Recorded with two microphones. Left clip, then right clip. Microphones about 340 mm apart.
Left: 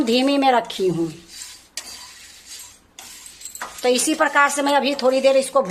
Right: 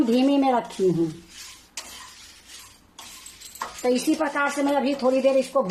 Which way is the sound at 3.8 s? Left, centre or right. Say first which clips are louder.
Left 5 dB; left.